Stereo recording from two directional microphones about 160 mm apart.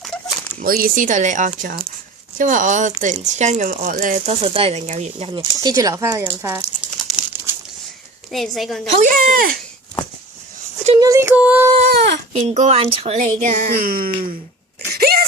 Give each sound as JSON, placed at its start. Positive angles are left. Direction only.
{"t": 0.0, "sound": "a sound", "side_deg": 5}
{"t": 0.6, "sound": "speech", "side_deg": -65}
{"t": 2.4, "sound": "speech", "side_deg": -55}
{"t": 4.3, "sound": "speech", "side_deg": -35}
{"t": 5.3, "sound": "speech", "side_deg": -25}
{"t": 8.3, "sound": "a woman's voice", "side_deg": 0}
{"t": 9.0, "sound": "speech", "side_deg": -55}
{"t": 11.0, "sound": "music", "side_deg": -20}
{"t": 11.9, "sound": "a sound", "side_deg": -90}
{"t": 12.3, "sound": "speech", "side_deg": -45}
{"t": 14.9, "sound": "a sound", "side_deg": -70}